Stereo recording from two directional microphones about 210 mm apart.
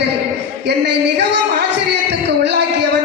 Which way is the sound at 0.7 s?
55° right (ahead or behind).